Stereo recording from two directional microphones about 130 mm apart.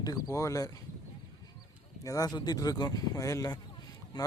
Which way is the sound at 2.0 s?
25° left (ahead or behind).